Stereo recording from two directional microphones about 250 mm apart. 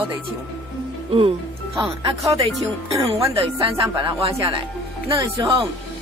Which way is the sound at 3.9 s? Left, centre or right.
Right.